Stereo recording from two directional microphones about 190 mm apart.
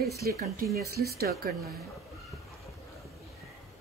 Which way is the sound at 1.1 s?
55° right (ahead or behind).